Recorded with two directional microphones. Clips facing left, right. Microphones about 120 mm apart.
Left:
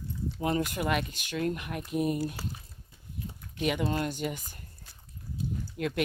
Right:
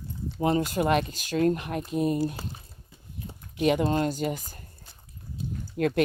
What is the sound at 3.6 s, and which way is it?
Speech, 35° right (ahead or behind).